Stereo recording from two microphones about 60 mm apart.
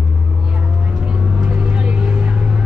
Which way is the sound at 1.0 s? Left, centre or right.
Right.